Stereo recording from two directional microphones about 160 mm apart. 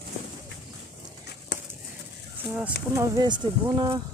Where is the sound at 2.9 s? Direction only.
20° right (ahead or behind).